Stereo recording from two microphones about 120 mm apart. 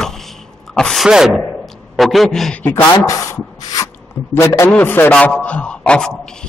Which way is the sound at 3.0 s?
25° left (ahead or behind).